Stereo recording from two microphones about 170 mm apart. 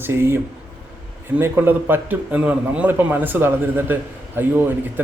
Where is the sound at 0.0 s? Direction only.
15° right (ahead or behind).